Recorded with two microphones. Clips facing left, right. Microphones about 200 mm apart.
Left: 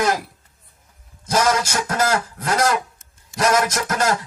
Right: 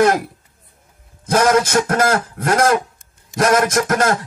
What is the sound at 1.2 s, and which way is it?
Speech, 55° right (ahead or behind).